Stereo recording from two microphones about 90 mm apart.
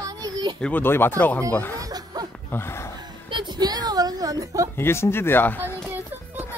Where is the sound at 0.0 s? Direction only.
45° right (ahead or behind).